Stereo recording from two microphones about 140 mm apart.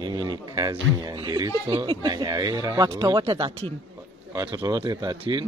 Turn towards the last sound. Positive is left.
turn(degrees=-30)  # may be behind; listen again after turning